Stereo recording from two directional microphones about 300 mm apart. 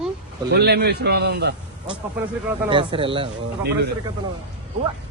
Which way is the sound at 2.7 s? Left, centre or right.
Centre.